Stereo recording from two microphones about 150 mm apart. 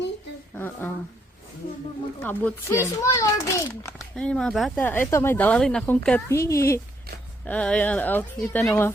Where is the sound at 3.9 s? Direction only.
5° left (ahead or behind).